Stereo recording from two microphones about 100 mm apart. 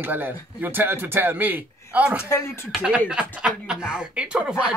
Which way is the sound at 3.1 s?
10° right (ahead or behind).